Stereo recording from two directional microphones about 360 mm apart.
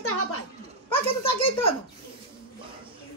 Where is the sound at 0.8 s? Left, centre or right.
Centre.